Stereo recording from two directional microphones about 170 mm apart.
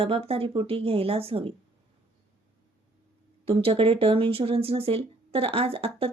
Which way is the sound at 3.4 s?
30° right (ahead or behind).